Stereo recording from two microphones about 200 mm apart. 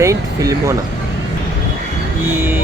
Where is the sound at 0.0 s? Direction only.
15° right (ahead or behind).